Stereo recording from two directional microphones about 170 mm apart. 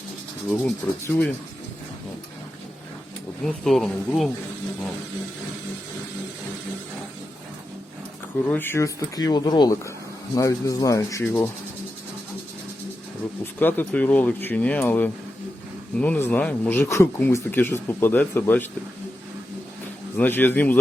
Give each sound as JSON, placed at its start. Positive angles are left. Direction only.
{"t": 0.4, "sound": "speech", "side_deg": 5}
{"t": 3.4, "sound": "speech", "side_deg": 0}
{"t": 8.4, "sound": "speech", "side_deg": 10}
{"t": 13.4, "sound": "speech", "side_deg": 10}
{"t": 20.1, "sound": "speech", "side_deg": 10}